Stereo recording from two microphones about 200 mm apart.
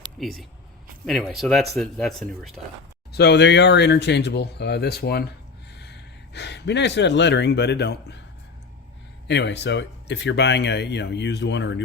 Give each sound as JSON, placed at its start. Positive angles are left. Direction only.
{"t": 0.2, "sound": "speech", "side_deg": 0}
{"t": 3.1, "sound": "speech", "side_deg": 55}
{"t": 9.2, "sound": "speech", "side_deg": 60}